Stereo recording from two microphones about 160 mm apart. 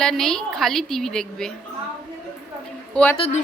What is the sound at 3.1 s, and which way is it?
Speech, 35° left (ahead or behind).